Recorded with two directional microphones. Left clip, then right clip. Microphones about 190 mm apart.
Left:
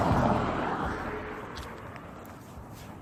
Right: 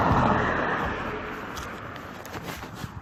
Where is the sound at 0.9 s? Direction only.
40° right (ahead or behind).